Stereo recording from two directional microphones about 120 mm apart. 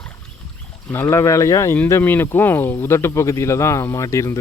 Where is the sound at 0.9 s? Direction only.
20° left (ahead or behind).